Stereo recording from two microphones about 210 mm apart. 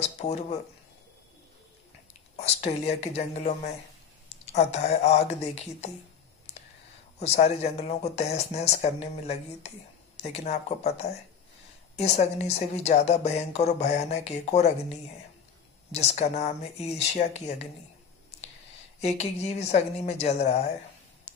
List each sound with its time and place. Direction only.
0.0 s speech: 30° left (ahead or behind)
2.3 s speech: 30° left (ahead or behind)
7.2 s speech: 30° left (ahead or behind)
15.9 s speech: 30° left (ahead or behind)
18.9 s speech: 30° left (ahead or behind)